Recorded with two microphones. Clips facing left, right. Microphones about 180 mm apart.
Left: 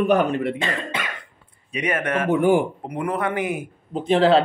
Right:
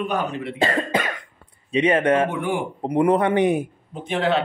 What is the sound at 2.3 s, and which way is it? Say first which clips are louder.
Speech: left 8 dB; 40° left (ahead or behind).